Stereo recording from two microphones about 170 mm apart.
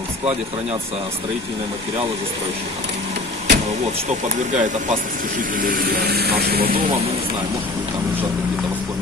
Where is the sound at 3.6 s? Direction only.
45° right (ahead or behind); by 6.8 s 65° right (ahead or behind).